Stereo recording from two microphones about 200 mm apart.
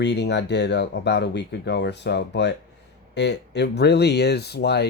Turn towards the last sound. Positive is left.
turn(degrees=55)  # may be behind; listen again after turning